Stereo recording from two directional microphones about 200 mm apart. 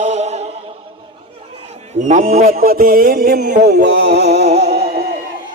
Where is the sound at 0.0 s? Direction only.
35° right (ahead or behind).